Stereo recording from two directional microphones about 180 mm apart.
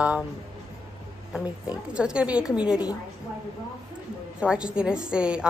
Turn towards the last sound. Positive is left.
turn(degrees=-5)  # may be behind; listen again after turning